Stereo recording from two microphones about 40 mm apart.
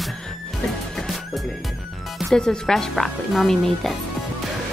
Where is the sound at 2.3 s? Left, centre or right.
Centre.